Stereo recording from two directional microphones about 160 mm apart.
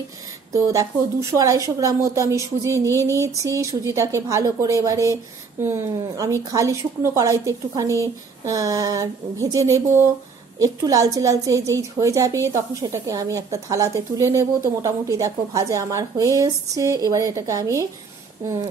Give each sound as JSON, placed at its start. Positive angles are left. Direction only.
{"t": 0.5, "sound": "a woman's voice", "side_deg": -20}